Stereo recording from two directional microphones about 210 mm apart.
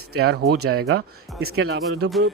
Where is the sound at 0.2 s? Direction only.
50° right (ahead or behind).